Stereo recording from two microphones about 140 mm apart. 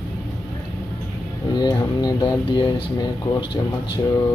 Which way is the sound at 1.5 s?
30° left (ahead or behind).